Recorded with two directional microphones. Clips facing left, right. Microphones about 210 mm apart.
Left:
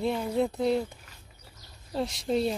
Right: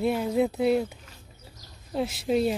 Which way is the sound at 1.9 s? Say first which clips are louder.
Right 3 dB; 5° right (ahead or behind).